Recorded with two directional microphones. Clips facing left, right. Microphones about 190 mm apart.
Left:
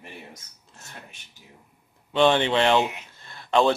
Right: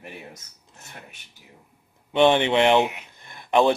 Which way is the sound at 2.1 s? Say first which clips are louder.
Right 2 dB; 15° right (ahead or behind).